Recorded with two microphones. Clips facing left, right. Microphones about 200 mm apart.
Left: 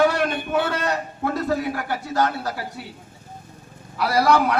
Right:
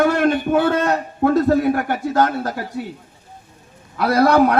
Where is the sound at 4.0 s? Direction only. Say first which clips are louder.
Right 5 dB; 55° right (ahead or behind).